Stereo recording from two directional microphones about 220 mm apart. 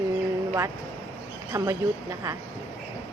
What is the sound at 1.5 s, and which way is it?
Speech, 15° right (ahead or behind).